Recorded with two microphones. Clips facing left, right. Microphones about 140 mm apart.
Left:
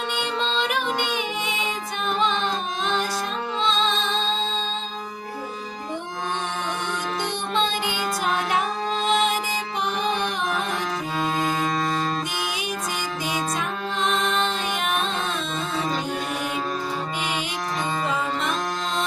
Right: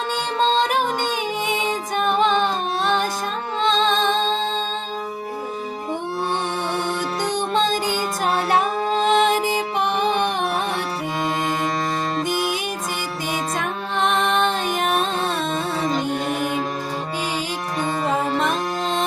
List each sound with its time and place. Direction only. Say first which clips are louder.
0.3 s music: right 8 dB; 40° right (ahead or behind)
7.5 s music: right 3 dB; 40° right (ahead or behind)
13.6 s music: right 3 dB; 60° right (ahead or behind)
14.8 s music: right 4 dB; 40° right (ahead or behind)
18.1 s music: right 5 dB; 45° right (ahead or behind)